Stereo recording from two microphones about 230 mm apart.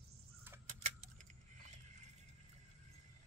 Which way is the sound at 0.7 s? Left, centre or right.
Right.